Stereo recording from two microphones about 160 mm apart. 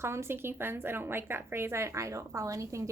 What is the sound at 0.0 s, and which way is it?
A woman's voice, 15° right (ahead or behind).